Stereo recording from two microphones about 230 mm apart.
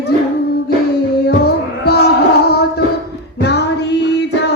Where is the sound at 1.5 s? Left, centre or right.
Left.